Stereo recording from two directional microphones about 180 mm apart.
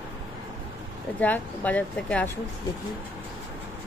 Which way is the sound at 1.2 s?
10° left (ahead or behind).